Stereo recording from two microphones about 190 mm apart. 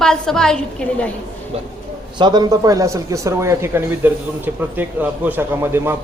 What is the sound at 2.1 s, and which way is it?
A man's voice, 25° right (ahead or behind).